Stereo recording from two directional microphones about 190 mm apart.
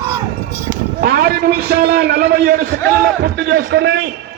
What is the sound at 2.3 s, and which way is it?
A man's voice, 55° right (ahead or behind).